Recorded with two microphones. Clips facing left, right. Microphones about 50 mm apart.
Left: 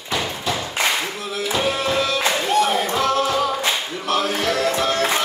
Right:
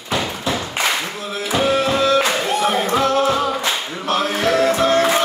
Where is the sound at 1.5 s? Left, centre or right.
Right.